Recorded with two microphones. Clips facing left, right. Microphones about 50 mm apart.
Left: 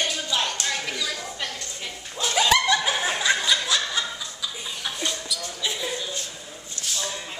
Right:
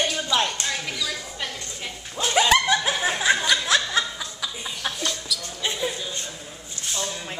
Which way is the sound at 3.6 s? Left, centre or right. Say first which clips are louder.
Right 4 dB; right.